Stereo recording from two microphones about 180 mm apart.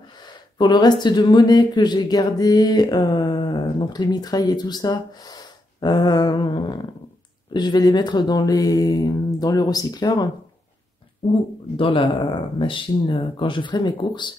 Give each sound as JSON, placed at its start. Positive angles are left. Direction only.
{"t": 0.2, "sound": "speech", "side_deg": 25}
{"t": 11.7, "sound": "speech", "side_deg": 30}